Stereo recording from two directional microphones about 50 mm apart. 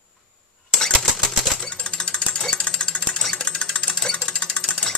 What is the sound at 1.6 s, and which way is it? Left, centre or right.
Jackhammer, centre.